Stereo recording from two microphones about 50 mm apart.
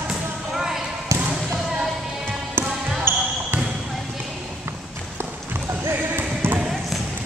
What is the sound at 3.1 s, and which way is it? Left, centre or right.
Basketball bounce, right.